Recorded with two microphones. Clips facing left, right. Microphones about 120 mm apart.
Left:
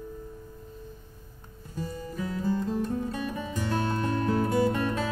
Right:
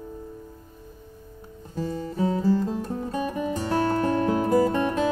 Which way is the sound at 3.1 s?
40° right (ahead or behind).